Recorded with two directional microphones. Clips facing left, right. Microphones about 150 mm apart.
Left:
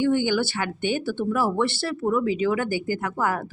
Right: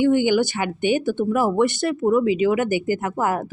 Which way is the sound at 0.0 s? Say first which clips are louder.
Right 4 dB; 15° right (ahead or behind).